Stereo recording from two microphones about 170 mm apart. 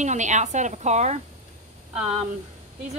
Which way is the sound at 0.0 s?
45° right (ahead or behind).